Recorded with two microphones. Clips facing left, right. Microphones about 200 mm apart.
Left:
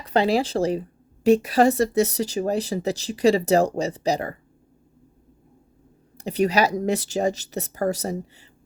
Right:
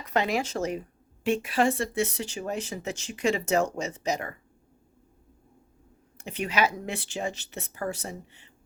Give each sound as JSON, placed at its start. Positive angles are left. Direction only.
{"t": 0.0, "sound": "a woman's voice", "side_deg": 30}
{"t": 6.1, "sound": "a woman's voice", "side_deg": 35}